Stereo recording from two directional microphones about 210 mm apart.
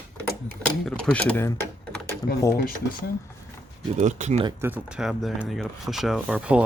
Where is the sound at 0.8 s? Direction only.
5° left (ahead or behind).